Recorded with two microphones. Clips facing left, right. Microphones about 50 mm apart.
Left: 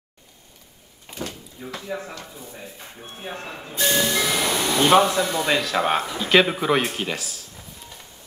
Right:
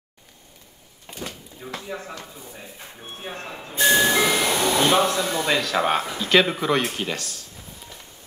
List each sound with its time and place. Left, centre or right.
1.2 s a sound: centre
3.7 s music: centre
4.3 s music: centre
4.7 s speech: centre